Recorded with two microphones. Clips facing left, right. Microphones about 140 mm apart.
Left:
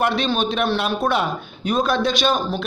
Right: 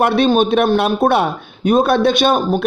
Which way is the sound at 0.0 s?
55° right (ahead or behind).